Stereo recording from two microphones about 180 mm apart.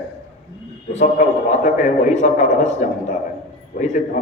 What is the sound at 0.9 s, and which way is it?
A man's voice, 40° left (ahead or behind).